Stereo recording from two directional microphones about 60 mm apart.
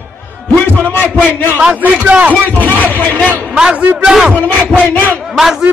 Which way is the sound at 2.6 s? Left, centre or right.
Left.